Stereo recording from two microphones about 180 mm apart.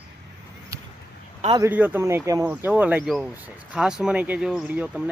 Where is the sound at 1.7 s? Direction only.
10° right (ahead or behind).